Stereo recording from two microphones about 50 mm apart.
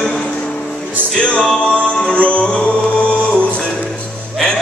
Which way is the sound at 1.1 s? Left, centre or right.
Centre.